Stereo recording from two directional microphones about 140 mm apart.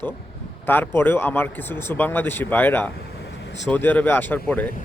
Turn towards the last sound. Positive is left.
turn(degrees=10)  # may be behind; listen again after turning